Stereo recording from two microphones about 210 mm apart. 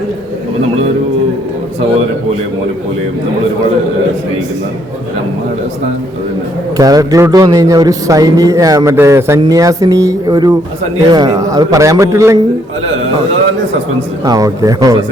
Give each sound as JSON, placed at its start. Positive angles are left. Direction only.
{"t": 6.7, "sound": "a man's voice", "side_deg": -15}
{"t": 14.3, "sound": "a man's voice", "side_deg": -15}